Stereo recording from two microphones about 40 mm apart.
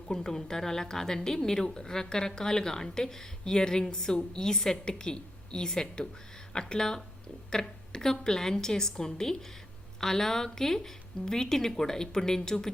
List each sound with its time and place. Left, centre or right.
0.1 s a woman's voice: centre